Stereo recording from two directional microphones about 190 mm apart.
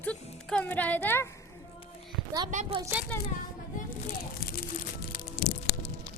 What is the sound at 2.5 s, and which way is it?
Speech, 40° right (ahead or behind).